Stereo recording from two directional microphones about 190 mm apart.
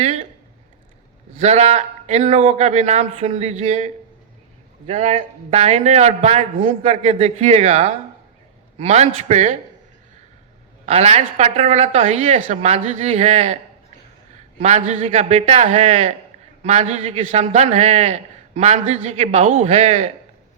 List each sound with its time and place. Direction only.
0.0 s a sound: 35° right (ahead or behind)
1.4 s a man's voice: 35° right (ahead or behind)
10.8 s a man's voice: 35° right (ahead or behind)
14.6 s a man's voice: 35° right (ahead or behind)